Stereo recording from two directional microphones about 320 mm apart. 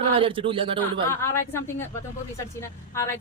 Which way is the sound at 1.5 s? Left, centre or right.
Centre.